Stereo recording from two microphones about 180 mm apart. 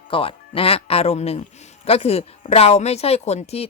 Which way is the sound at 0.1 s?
30° left (ahead or behind).